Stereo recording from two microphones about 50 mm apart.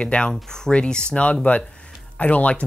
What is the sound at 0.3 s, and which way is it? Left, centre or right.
Speech, centre.